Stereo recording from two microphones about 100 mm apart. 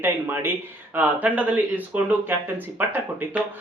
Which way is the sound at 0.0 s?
20° right (ahead or behind).